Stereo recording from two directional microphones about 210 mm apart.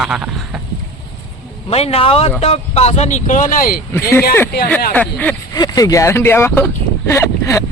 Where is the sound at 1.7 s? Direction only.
30° left (ahead or behind).